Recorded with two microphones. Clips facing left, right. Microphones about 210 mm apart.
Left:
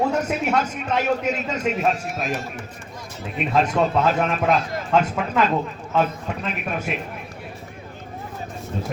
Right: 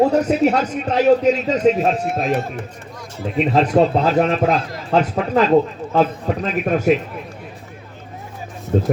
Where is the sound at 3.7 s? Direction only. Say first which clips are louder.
Right 5 dB; 35° right (ahead or behind).